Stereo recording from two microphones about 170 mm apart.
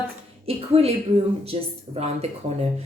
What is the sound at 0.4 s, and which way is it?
Speech, 35° right (ahead or behind).